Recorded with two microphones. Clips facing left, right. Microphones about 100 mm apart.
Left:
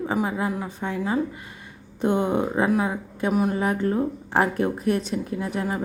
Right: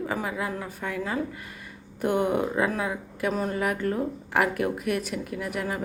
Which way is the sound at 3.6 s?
25° left (ahead or behind).